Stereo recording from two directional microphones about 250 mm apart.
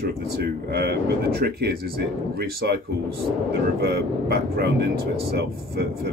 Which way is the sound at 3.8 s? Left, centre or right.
Right.